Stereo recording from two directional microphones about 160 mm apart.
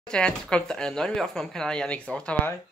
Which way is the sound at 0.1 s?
5° left (ahead or behind).